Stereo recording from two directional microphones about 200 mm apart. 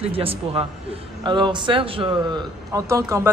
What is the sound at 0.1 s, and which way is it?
A man's voice, 30° right (ahead or behind).